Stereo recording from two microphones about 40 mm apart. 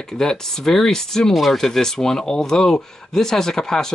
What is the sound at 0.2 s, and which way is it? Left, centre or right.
Speech, centre.